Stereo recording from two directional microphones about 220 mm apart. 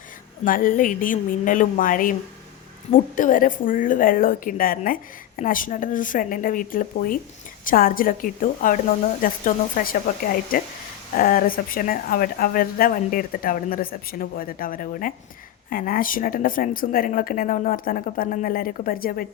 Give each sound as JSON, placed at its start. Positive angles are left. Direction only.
{"t": 0.4, "sound": "speech", "side_deg": 40}